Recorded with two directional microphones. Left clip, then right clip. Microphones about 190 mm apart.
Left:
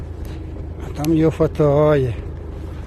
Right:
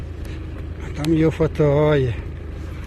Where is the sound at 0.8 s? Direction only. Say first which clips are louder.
Left 2 dB; 15° left (ahead or behind).